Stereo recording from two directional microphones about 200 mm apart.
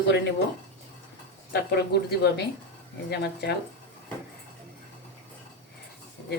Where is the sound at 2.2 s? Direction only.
55° left (ahead or behind).